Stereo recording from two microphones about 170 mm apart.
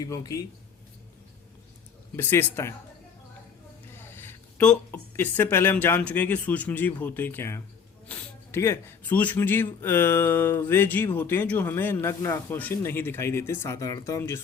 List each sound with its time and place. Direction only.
0.0 s speech: 20° left (ahead or behind)
2.1 s speech: 15° left (ahead or behind)
3.9 s speech: 15° left (ahead or behind)